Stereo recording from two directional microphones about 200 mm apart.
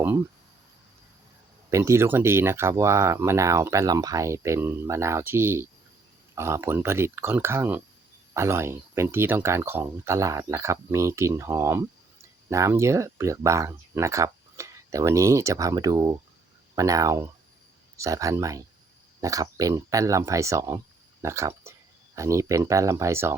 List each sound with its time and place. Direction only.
1.7 s speech: 15° right (ahead or behind)